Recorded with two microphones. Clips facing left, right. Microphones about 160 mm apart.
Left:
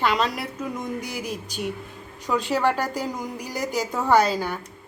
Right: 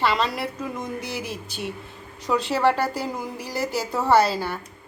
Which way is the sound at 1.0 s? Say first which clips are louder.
Even; 45° left (ahead or behind).